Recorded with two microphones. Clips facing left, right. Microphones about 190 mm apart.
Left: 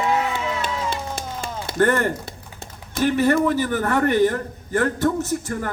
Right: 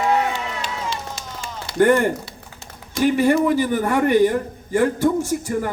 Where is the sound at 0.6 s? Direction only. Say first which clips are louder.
Left 2 dB; 55° left (ahead or behind).